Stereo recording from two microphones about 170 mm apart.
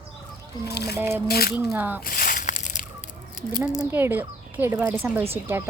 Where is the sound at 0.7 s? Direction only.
75° left (ahead or behind).